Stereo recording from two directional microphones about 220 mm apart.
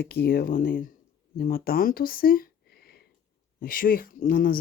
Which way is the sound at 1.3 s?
45° left (ahead or behind).